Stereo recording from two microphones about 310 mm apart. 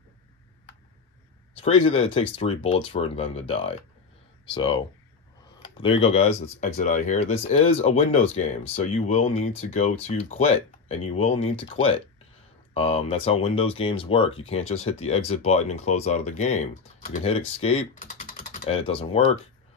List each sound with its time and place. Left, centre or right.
1.6 s speech: centre
5.6 s a sound: centre
6.0 s speech: centre